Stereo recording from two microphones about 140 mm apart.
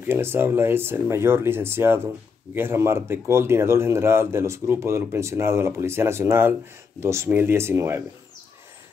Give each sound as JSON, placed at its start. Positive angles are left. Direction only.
{"t": 0.0, "sound": "speech", "side_deg": -15}